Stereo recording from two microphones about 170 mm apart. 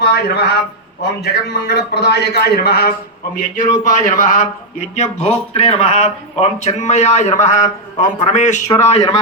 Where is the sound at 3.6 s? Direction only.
55° left (ahead or behind).